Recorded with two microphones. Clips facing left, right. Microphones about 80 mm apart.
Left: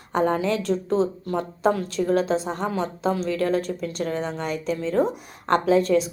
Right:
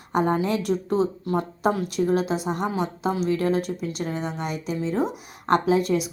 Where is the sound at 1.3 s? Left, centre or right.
Right.